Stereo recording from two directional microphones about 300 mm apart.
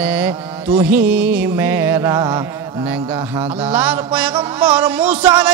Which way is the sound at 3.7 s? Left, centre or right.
Centre.